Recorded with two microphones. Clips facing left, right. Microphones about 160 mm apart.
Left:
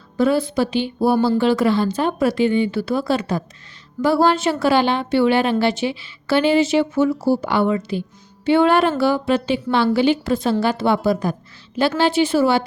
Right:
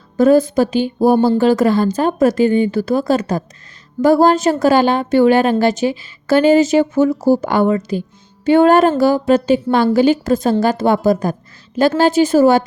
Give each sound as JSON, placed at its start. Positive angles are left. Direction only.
{"t": 0.2, "sound": "a woman's voice", "side_deg": -45}